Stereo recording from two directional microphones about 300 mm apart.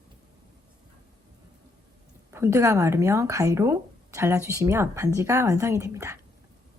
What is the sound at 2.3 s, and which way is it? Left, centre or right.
Speech, centre.